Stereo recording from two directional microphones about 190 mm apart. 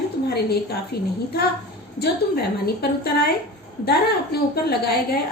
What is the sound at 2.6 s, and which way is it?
A woman's voice, 55° left (ahead or behind).